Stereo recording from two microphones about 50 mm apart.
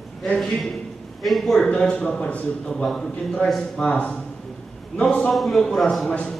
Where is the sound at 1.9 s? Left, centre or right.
Left.